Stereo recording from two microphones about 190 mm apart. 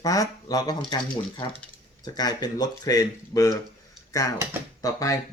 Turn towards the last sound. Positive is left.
turn(degrees=20)  # may be behind; listen again after turning